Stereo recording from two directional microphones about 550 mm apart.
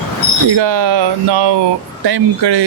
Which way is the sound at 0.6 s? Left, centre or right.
Right.